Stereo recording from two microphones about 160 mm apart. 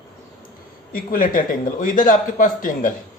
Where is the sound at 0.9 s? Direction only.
60° left (ahead or behind).